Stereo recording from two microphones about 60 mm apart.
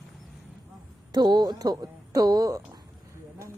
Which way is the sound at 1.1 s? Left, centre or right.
Right.